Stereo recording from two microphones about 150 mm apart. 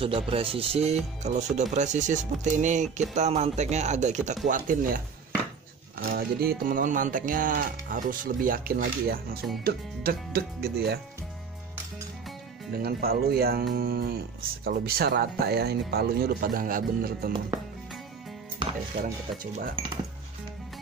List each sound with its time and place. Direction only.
0.0 s speech: 35° right (ahead or behind)
4.4 s speech: 60° right (ahead or behind)
6.0 s music: 90° right
9.6 s speech: 90° right
12.7 s speech: 90° right; by 17.3 s 75° right (ahead or behind)
19.4 s speech: 65° right (ahead or behind)